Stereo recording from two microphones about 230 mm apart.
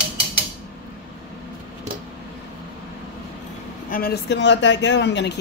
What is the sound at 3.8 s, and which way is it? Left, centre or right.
Speech, left.